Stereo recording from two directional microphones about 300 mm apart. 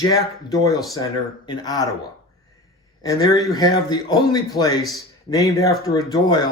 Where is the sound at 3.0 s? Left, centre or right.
Centre.